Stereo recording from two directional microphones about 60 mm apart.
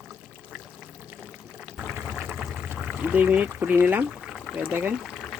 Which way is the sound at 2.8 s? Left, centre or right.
Right.